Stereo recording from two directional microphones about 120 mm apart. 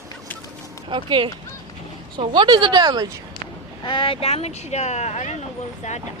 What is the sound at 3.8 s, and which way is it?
Speech, 45° left (ahead or behind).